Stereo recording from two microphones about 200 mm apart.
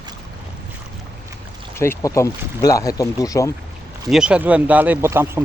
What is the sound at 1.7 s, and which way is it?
Speech, 10° left (ahead or behind).